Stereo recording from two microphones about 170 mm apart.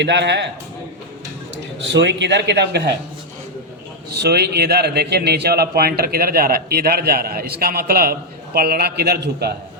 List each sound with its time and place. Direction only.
0.0 s a man's voice: 90° right
1.9 s a man's voice: 90° right
4.1 s a man's voice: 70° right (ahead or behind)